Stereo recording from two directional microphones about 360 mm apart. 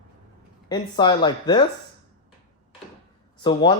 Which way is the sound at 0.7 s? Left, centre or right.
Centre.